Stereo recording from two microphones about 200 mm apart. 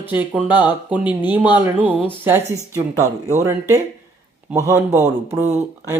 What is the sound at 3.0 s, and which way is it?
Speech, 35° right (ahead or behind).